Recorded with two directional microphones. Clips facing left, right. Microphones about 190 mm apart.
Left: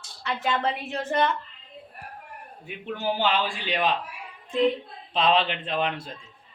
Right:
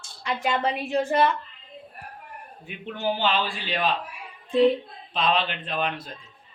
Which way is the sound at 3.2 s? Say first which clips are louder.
Even; 15° left (ahead or behind).